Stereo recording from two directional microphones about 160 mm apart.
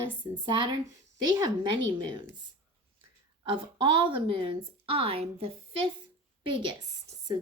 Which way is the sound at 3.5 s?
30° right (ahead or behind).